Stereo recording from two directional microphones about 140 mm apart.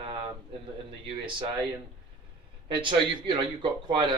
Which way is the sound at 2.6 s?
35° right (ahead or behind).